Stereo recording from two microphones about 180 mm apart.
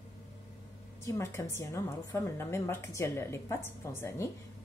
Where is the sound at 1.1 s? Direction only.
15° left (ahead or behind).